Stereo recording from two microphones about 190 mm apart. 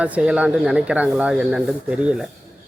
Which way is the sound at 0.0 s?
5° right (ahead or behind).